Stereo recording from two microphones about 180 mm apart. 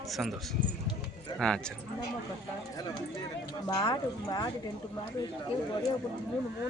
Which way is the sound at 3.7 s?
20° left (ahead or behind).